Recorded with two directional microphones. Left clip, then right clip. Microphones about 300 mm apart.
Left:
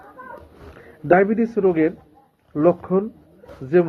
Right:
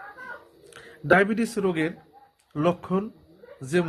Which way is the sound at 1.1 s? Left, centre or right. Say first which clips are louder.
Left 4 dB; right.